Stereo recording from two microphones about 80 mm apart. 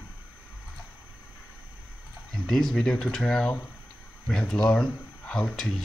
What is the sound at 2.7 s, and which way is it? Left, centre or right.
Speech, centre.